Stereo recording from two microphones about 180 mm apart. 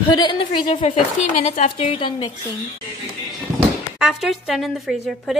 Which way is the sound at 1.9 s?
30° left (ahead or behind).